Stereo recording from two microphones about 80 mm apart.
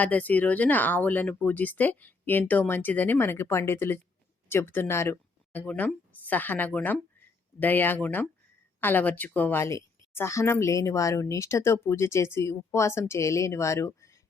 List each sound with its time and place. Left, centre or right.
0.0 s speech: centre
5.5 s speech: left
9.6 s speech: left